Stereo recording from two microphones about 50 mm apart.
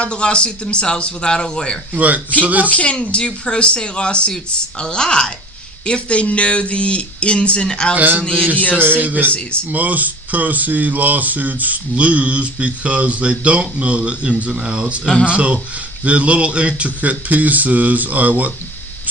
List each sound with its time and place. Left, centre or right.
0.0 s a man's voice: left
1.9 s speech: right
2.6 s a man's voice: left
7.9 s speech: right
8.2 s a man's voice: centre
8.8 s speech: right